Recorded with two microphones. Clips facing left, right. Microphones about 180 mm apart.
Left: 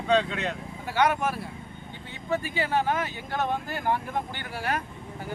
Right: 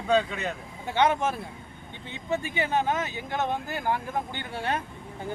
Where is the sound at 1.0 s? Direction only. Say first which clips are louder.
Right 1 dB; 25° right (ahead or behind).